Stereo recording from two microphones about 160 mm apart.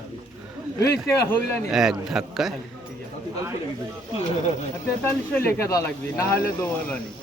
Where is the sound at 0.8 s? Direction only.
20° left (ahead or behind).